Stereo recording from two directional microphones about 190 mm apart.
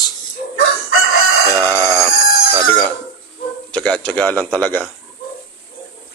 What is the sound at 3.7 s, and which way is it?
A man's voice, 5° left (ahead or behind).